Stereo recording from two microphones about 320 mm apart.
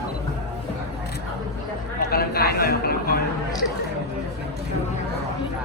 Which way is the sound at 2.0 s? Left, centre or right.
Left.